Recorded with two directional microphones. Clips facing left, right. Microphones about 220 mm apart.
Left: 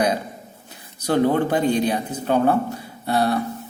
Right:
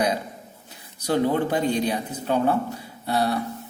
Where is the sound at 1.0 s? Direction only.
55° left (ahead or behind).